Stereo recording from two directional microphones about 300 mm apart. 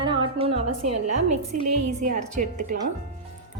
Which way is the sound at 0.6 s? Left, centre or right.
Right.